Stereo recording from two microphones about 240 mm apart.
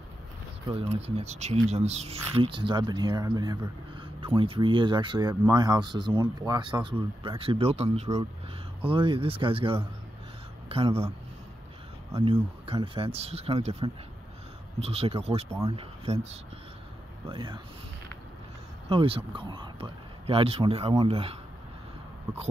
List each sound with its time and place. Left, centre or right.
0.9 s speech: right
18.9 s speech: right